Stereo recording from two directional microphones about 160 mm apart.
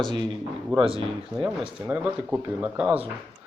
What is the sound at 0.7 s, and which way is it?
Speech, 35° right (ahead or behind).